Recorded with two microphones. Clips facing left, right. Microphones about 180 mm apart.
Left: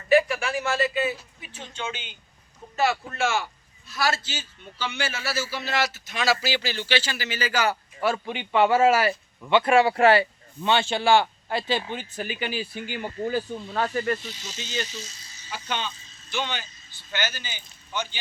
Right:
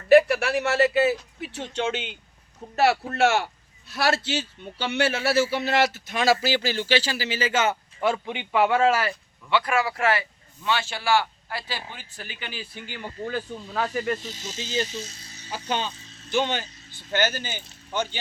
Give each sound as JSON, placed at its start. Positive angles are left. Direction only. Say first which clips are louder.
{"t": 0.1, "sound": "a man's voice", "louder": "right 4 dB", "side_deg": -65}
{"t": 8.5, "sound": "speech", "louder": "left 2 dB", "side_deg": 0}
{"t": 9.0, "sound": "speech", "louder": "left 4 dB", "side_deg": 25}
{"t": 13.9, "sound": "speech", "louder": "left 1 dB", "side_deg": -15}
{"t": 14.2, "sound": "speech", "louder": "right 2 dB", "side_deg": -45}
{"t": 14.6, "sound": "speech", "louder": "right 4 dB", "side_deg": -30}
{"t": 14.8, "sound": "speech", "louder": "right 4 dB", "side_deg": -55}
{"t": 15.4, "sound": "speech", "louder": "right 3 dB", "side_deg": -35}
{"t": 16.0, "sound": "vehicle", "louder": "right 7 dB", "side_deg": -65}
{"t": 16.3, "sound": "speech", "louder": "right 6 dB", "side_deg": -45}
{"t": 16.6, "sound": "vehicle", "louder": "right 5 dB", "side_deg": -70}
{"t": 17.1, "sound": "speech", "louder": "right 6 dB", "side_deg": -50}